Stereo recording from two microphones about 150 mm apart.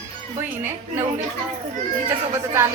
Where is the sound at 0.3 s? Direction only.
15° right (ahead or behind).